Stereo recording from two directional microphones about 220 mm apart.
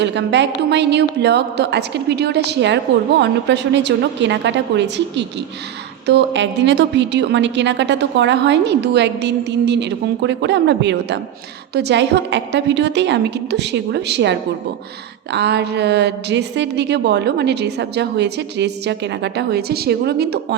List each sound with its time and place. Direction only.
0.0 s a woman's voice: 55° right (ahead or behind)